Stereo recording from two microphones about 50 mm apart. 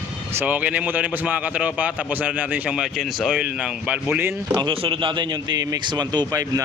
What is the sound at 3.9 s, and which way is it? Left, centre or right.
Speech, right.